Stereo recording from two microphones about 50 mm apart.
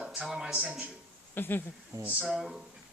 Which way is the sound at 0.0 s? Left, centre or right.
Right.